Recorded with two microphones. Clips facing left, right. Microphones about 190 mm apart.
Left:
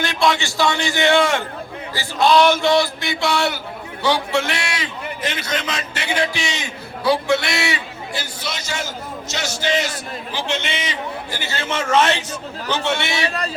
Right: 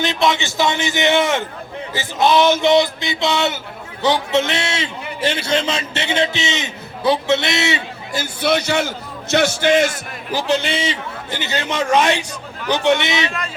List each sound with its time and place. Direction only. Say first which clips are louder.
0.0 s a sound: right 1 dB; 20° right (ahead or behind)
1.9 s a man's voice: even; 20° right (ahead or behind)
8.1 s a man's voice: right 11 dB; 55° right (ahead or behind)
10.3 s a man's voice: right 7 dB; 35° right (ahead or behind); by 13.2 s 20° right (ahead or behind)